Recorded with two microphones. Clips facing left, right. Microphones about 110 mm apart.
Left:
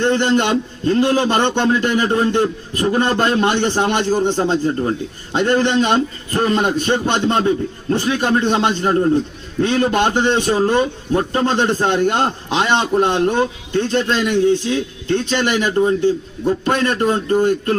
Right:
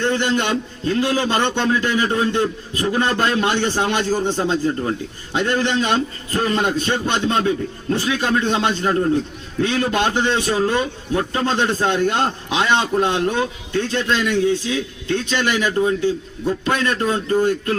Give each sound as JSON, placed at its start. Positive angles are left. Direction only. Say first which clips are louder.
{"t": 0.0, "sound": "a man's voice", "louder": "left 4 dB", "side_deg": 20}
{"t": 0.9, "sound": "a man's voice", "louder": "left 4 dB", "side_deg": 35}
{"t": 11.5, "sound": "a man's voice", "louder": "left 1 dB", "side_deg": 20}